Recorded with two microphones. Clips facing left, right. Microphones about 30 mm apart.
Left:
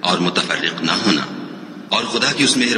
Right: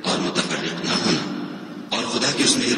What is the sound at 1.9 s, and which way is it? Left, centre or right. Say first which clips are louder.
Speech: left 4 dB; left.